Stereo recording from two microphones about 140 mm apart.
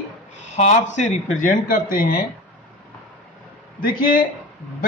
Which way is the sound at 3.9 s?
90° left.